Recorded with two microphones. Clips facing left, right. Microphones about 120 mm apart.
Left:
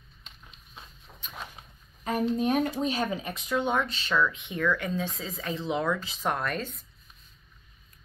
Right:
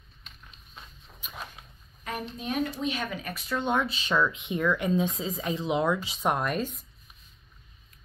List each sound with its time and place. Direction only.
1.2 s a sound: 10° right (ahead or behind)
2.0 s speech: 40° left (ahead or behind); by 3.4 s 25° left (ahead or behind)
3.4 s speech: 10° left (ahead or behind)
3.7 s speech: 10° right (ahead or behind)